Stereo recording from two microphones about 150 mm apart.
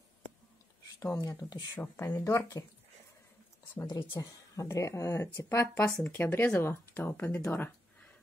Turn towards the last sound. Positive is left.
turn(degrees=15)  # may be behind; listen again after turning